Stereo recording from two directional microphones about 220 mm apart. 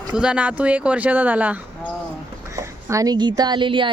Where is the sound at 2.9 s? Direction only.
15° right (ahead or behind).